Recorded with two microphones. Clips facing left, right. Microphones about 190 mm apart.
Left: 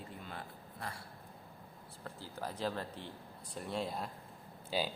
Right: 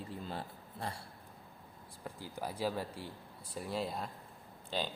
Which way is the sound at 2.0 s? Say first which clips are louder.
Right 2 dB; 15° right (ahead or behind).